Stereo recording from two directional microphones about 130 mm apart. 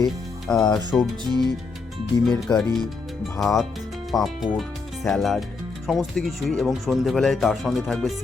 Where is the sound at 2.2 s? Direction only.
5° left (ahead or behind).